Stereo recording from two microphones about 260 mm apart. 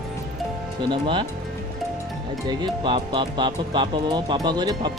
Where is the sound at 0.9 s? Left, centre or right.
Centre.